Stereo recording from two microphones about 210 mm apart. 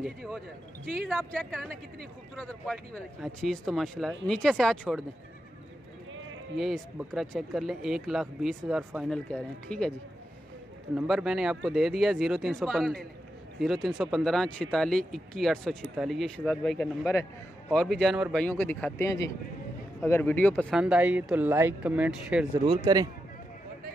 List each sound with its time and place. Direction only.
0.0 s speech: centre (ahead or behind)
6.5 s speech: centre (ahead or behind)
11.0 s a man's voice: 5° right (ahead or behind)
20.7 s speech: 5° right (ahead or behind)
22.7 s speech: 20° right (ahead or behind)